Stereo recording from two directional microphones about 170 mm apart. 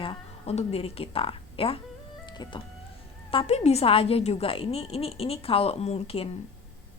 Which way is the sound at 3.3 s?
40° left (ahead or behind).